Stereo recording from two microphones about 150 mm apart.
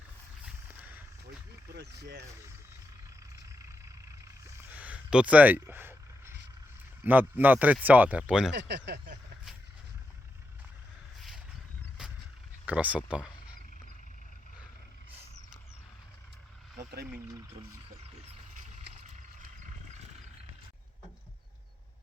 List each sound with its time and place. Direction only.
0.4 s a sound: 10° right (ahead or behind)
1.7 s speech: 90° right
4.4 s a sound: 15° right (ahead or behind)
7.0 s speech: 10° right (ahead or behind)
8.5 s speech: 90° right
12.0 s vehicle: 5° right (ahead or behind)
12.6 s speech: 10° right (ahead or behind)